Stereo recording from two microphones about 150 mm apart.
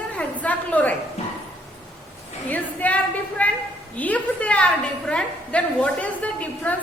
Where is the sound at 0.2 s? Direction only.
10° left (ahead or behind).